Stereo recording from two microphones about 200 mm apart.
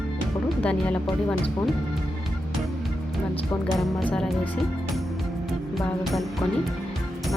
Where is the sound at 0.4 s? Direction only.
5° left (ahead or behind).